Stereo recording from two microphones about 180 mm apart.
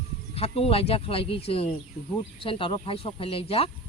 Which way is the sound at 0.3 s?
35° left (ahead or behind).